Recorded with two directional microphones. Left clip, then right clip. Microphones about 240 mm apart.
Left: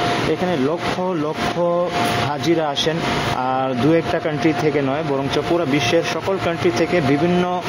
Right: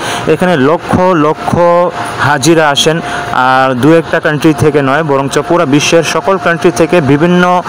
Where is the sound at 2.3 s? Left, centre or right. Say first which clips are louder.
Right 12 dB; right.